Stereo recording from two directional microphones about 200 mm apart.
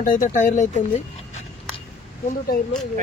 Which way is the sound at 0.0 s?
40° left (ahead or behind).